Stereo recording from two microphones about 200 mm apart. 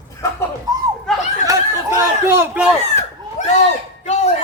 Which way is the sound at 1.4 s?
15° right (ahead or behind).